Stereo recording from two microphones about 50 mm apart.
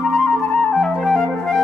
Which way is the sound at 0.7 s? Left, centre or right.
Centre.